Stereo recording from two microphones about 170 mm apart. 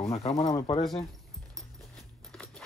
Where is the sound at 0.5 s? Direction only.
25° left (ahead or behind).